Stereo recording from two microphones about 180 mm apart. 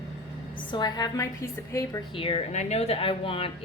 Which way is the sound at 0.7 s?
25° left (ahead or behind).